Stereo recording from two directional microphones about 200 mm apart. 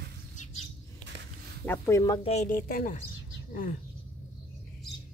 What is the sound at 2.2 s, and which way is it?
Speech, 35° left (ahead or behind).